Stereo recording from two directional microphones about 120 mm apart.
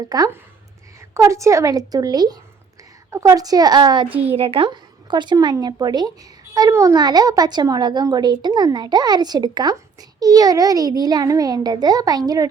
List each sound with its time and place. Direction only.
0.1 s a woman's voice: 30° right (ahead or behind)
4.1 s a child's voice: 15° right (ahead or behind)
4.4 s speech: 50° right (ahead or behind); by 12.5 s 30° right (ahead or behind)